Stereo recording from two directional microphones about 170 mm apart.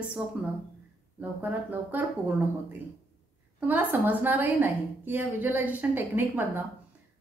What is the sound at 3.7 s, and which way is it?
A woman's voice, 10° right (ahead or behind).